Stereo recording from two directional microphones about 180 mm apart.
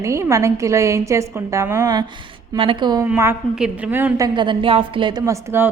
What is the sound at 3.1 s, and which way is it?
A woman's voice, 10° right (ahead or behind).